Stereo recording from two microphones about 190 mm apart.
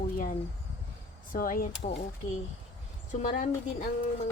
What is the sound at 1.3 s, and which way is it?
Speech, 45° left (ahead or behind).